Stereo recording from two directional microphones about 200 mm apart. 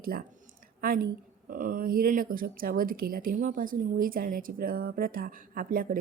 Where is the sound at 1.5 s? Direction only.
40° right (ahead or behind).